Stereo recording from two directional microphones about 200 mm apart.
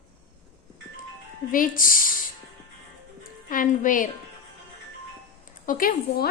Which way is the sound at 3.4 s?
40° left (ahead or behind).